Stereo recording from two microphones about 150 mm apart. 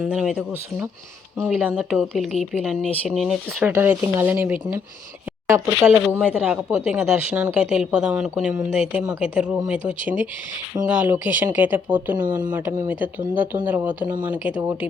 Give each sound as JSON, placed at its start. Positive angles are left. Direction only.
{"t": 0.0, "sound": "speech", "side_deg": -5}
{"t": 1.5, "sound": "speech", "side_deg": -5}
{"t": 3.7, "sound": "speech", "side_deg": -15}